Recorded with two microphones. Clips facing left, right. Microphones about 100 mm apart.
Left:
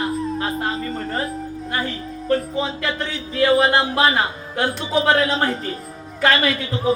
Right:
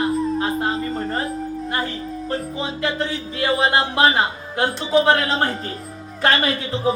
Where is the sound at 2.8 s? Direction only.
25° right (ahead or behind).